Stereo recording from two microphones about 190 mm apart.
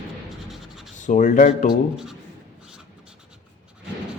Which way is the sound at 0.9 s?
40° left (ahead or behind).